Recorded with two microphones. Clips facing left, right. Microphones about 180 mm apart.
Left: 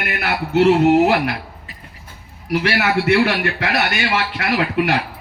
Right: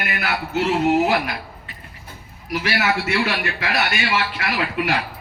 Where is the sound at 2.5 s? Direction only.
65° left (ahead or behind).